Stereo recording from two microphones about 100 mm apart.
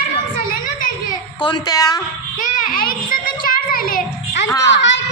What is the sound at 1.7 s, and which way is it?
Speech, 40° left (ahead or behind).